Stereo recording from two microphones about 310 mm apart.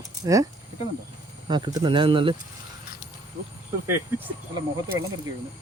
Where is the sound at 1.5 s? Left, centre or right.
Centre.